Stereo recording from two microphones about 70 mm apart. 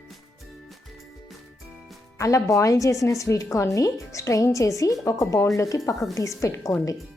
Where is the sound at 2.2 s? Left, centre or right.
Left.